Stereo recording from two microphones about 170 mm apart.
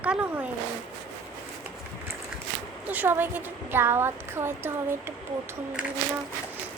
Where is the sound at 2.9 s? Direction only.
10° right (ahead or behind).